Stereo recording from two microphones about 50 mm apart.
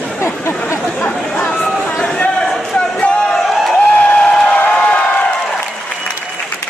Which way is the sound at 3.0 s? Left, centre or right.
Centre.